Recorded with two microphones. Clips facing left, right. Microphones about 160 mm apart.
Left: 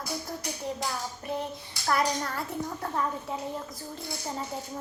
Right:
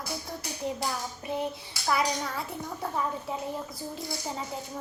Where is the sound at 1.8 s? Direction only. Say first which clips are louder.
Left 1 dB; 5° right (ahead or behind).